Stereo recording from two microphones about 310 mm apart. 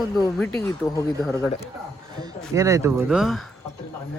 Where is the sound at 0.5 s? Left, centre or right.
Centre.